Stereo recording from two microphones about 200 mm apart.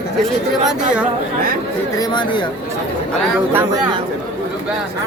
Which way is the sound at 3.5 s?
15° right (ahead or behind).